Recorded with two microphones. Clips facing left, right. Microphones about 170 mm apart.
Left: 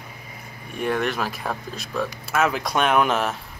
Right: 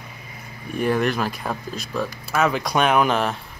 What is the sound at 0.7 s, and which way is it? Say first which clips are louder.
Speech: right 3 dB; centre (ahead or behind).